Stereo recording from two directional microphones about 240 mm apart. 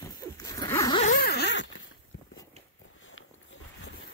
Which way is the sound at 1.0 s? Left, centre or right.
Left.